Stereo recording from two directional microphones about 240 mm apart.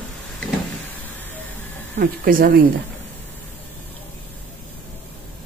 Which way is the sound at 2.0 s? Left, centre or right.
Right.